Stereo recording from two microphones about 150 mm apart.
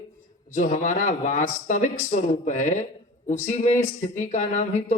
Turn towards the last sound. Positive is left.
turn(degrees=50)  # may be behind; listen again after turning